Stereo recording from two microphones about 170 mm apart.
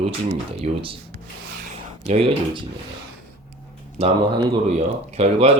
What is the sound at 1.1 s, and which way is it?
Rub, 55° right (ahead or behind).